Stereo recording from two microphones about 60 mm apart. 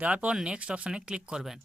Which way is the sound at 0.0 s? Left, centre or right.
Right.